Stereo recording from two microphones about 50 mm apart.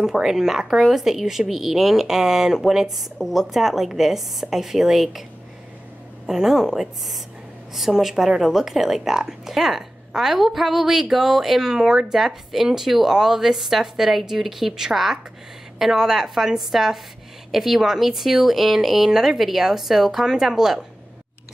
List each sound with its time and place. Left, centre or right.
0.0 s speech: centre
6.2 s speech: centre